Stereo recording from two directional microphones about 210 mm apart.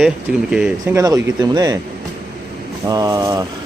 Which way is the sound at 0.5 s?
5° right (ahead or behind).